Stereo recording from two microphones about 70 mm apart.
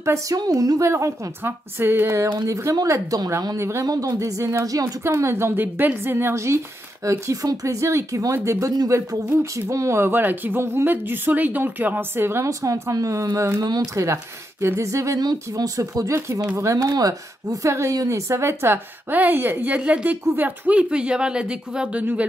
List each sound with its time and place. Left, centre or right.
0.3 s speech: right
0.8 s speech: right
2.4 s speech: right
3.5 s speech: right
3.8 s speech: right
4.6 s speech: right
5.0 s speech: right
12.4 s speech: right
13.6 s speech: right
13.9 s speech: right
15.5 s speech: right
17.6 s a woman's voice: right; by 22.0 s centre